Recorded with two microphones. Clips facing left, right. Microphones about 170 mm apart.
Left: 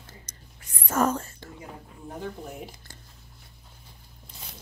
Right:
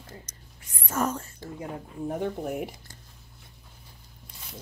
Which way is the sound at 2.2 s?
60° right (ahead or behind).